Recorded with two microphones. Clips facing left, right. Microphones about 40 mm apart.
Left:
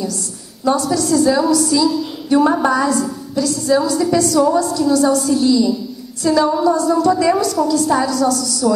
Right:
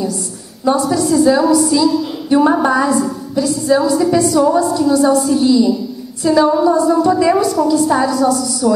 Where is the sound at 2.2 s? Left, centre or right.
Centre.